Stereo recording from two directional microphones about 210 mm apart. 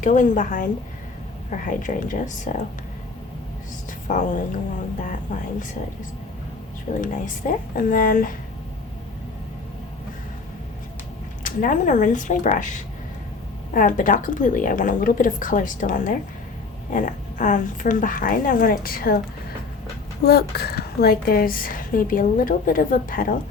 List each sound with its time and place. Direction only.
0.0 s a woman's voice: 40° left (ahead or behind)
4.1 s a woman's voice: 35° left (ahead or behind)
7.0 s a woman's voice: 40° left (ahead or behind)
11.4 s a woman's voice: 40° left (ahead or behind)
13.7 s a woman's voice: 40° left (ahead or behind)
20.2 s a woman's voice: 50° left (ahead or behind)